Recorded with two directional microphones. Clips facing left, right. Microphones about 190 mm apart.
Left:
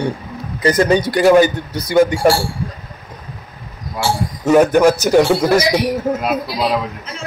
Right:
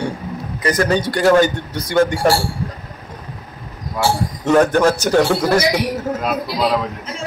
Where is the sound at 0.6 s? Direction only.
25° left (ahead or behind); by 2.1 s 10° left (ahead or behind).